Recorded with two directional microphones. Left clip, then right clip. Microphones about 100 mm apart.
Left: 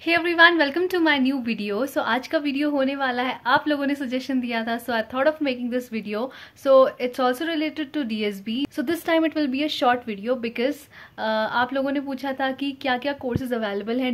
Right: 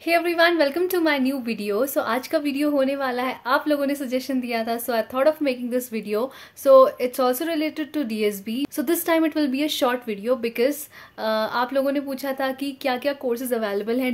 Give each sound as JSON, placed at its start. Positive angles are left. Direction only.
{"t": 0.0, "sound": "a woman's voice", "side_deg": -20}